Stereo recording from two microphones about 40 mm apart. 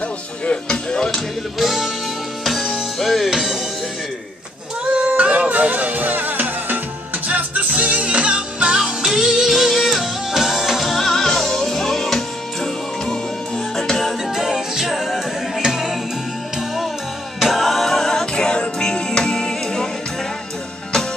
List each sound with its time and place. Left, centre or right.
0.5 s speech: centre
1.6 s music: centre
4.9 s music: right; by 12.2 s centre
13.7 s music: centre
14.3 s a capella: centre
15.6 s music: centre
17.4 s music: centre